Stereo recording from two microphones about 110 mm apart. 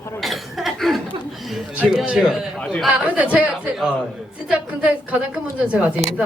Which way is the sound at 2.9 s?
10° right (ahead or behind).